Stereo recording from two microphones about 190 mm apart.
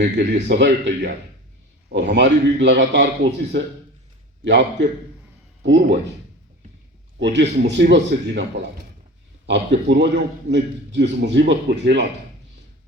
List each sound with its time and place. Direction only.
0.0 s a man's voice: 60° right (ahead or behind)
7.2 s a man's voice: 65° right (ahead or behind)
9.5 s a man's voice: 65° right (ahead or behind)